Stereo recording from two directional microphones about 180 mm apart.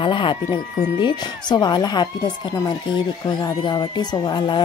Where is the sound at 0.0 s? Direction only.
25° left (ahead or behind).